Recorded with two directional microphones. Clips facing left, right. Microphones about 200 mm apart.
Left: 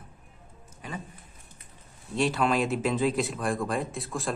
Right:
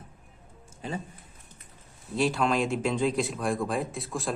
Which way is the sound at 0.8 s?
30° right (ahead or behind).